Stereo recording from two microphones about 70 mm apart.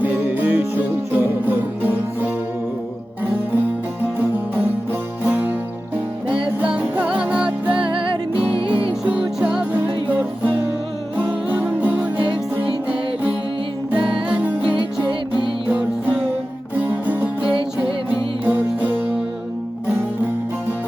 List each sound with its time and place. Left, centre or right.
0.0 s music: right
6.3 s music: centre
8.5 s music: left
9.2 s music: centre
10.1 s music: right
13.9 s music: centre
15.3 s music: left
16.8 s music: right